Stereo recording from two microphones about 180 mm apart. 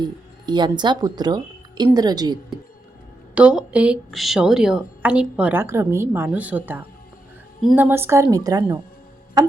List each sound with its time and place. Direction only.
0.0 s speech: 25° right (ahead or behind)
3.3 s a woman's voice: 5° right (ahead or behind)
7.9 s a woman's voice: 10° right (ahead or behind)
9.4 s tick-tock: 20° right (ahead or behind)